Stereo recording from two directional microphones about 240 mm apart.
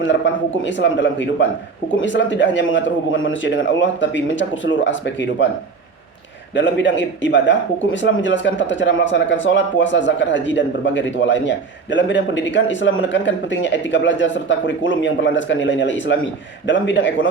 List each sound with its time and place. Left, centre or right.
0.0 s a man's voice: left
6.5 s a man's voice: left